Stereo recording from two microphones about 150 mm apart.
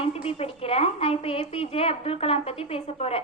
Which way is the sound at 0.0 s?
40° left (ahead or behind).